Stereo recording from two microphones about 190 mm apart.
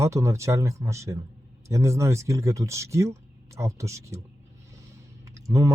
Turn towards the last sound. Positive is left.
turn(degrees=-15)  # may be behind; listen again after turning